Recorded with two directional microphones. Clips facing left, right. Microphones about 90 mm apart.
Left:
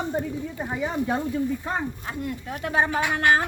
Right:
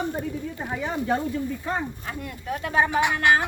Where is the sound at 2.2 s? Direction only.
25° left (ahead or behind).